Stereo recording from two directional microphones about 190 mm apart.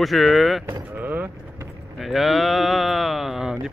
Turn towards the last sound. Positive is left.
turn(degrees=0)  # may be behind; listen again after turning